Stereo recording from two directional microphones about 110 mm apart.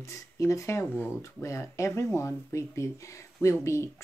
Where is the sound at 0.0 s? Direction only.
30° left (ahead or behind).